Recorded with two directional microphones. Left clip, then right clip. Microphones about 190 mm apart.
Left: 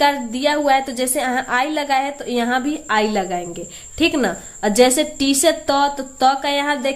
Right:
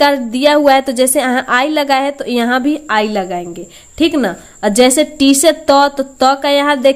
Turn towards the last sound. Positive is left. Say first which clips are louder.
# right 8 dB
turn(degrees=-45)  # may be behind; listen again after turning